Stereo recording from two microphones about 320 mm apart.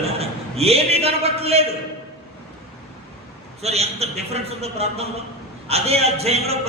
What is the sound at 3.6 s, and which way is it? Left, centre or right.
A man's voice, centre.